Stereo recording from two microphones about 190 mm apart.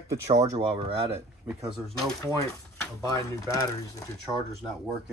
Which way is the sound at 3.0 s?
20° left (ahead or behind).